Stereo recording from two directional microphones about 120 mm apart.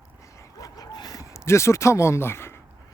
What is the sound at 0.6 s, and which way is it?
Dog, 35° left (ahead or behind).